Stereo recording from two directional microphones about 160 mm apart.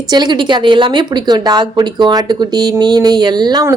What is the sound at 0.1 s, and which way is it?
A woman's voice, 30° right (ahead or behind).